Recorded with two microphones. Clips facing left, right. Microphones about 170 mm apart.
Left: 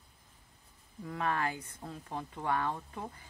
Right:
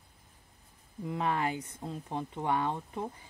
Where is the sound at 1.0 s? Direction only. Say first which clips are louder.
Right 2 dB; 20° right (ahead or behind).